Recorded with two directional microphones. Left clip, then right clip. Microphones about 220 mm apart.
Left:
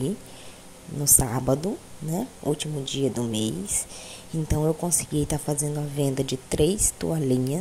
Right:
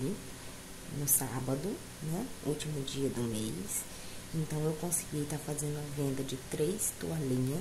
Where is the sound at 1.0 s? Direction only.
35° left (ahead or behind).